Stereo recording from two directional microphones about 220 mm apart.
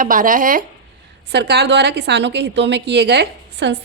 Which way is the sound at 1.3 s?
50° right (ahead or behind).